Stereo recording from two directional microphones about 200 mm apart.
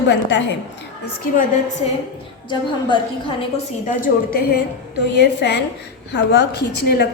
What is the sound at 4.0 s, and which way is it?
A woman's voice, 50° left (ahead or behind).